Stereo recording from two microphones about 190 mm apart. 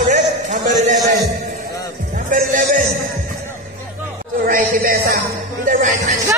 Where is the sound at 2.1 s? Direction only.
45° right (ahead or behind).